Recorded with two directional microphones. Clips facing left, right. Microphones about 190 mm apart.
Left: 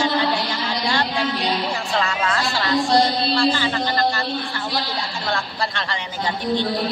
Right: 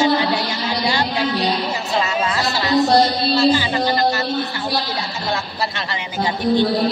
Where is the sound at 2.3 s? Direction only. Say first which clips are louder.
Right 2 dB; 5° right (ahead or behind).